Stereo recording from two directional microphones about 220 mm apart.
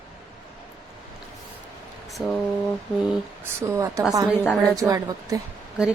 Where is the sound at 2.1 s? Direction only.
Centre (ahead or behind).